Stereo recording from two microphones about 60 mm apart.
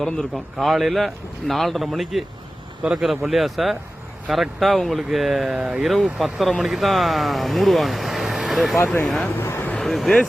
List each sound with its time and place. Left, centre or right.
0.0 s speech: centre
2.8 s speech: centre
3.1 s speech: centre
5.9 s speech: centre
9.4 s vehicle: left
9.8 s speech: centre